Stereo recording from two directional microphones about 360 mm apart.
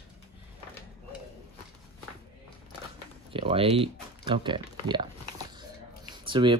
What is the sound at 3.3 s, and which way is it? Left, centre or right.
Speech, centre.